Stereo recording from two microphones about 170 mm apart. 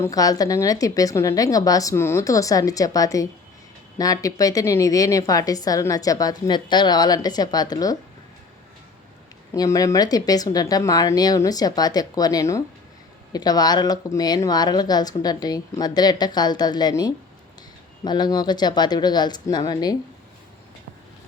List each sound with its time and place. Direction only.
0.0 s a woman's voice: 20° left (ahead or behind)
9.6 s a woman's voice: 20° left (ahead or behind)